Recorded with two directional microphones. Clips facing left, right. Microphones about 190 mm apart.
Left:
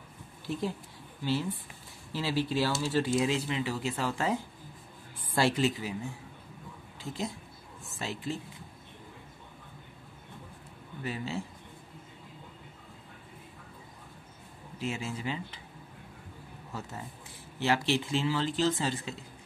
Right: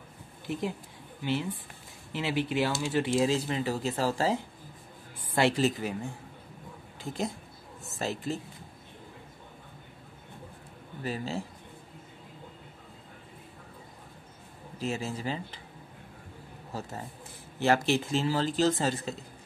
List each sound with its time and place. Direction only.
0.5 s speech: 20° right (ahead or behind)
5.6 s speech: 45° right (ahead or behind)
7.0 s speech: 50° right (ahead or behind)
11.0 s speech: 40° right (ahead or behind)
14.8 s speech: 40° right (ahead or behind)
17.6 s speech: 45° right (ahead or behind)